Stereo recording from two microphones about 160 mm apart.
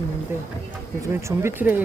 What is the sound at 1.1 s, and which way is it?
Speech, 15° right (ahead or behind).